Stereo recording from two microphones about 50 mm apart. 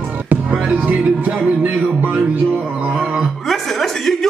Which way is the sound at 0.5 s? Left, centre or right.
Right.